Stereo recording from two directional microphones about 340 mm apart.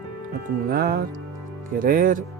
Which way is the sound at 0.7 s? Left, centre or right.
Right.